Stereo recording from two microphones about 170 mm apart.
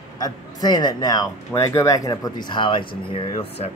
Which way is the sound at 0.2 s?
25° left (ahead or behind).